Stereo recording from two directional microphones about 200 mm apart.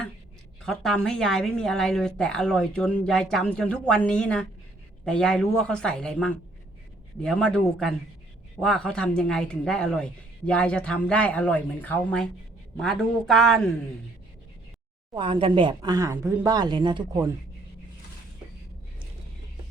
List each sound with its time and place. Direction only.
0.6 s a woman's voice: 5° left (ahead or behind)
15.1 s speech: 25° right (ahead or behind)